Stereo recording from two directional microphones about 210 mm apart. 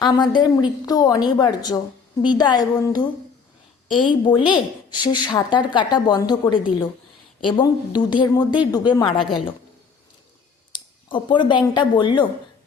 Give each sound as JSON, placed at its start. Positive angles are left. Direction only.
{"t": 0.0, "sound": "a woman's voice", "side_deg": 20}
{"t": 4.1, "sound": "a woman's voice", "side_deg": 25}
{"t": 10.7, "sound": "speech", "side_deg": 20}